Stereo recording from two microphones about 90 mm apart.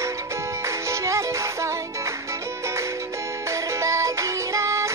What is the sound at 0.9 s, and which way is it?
Music, 35° right (ahead or behind).